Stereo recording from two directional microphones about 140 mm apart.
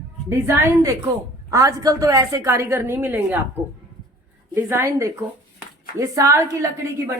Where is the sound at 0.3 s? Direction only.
20° right (ahead or behind).